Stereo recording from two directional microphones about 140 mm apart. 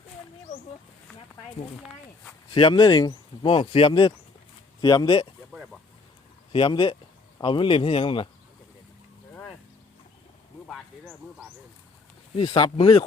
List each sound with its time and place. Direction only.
2.5 s speech: 30° left (ahead or behind)
3.5 s speech: 40° left (ahead or behind)
4.8 s speech: 30° left (ahead or behind)
5.5 s a sound: centre (ahead or behind)
6.5 s speech: 35° left (ahead or behind)
12.4 s speech: 35° left (ahead or behind)